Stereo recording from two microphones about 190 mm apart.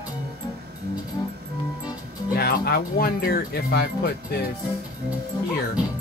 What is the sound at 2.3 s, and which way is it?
Speech, 55° left (ahead or behind).